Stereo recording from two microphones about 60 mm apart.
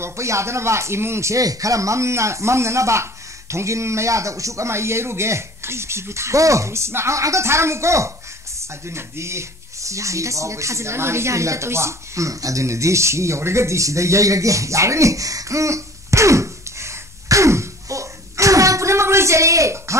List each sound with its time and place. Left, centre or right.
0.0 s a man's voice: right
1.4 s a man's voice: right